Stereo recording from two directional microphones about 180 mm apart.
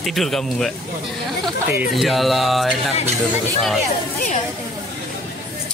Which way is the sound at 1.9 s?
Centre (ahead or behind).